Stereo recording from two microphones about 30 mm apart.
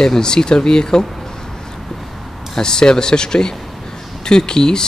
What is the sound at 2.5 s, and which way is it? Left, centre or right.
Speech, left.